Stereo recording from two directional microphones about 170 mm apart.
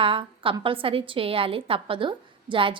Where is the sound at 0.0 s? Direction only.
30° right (ahead or behind).